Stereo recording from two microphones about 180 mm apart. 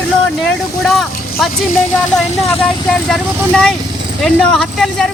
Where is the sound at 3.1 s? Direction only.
5° left (ahead or behind).